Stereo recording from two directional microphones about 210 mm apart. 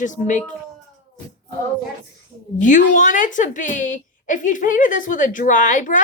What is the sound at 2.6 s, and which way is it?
Speech, 35° left (ahead or behind).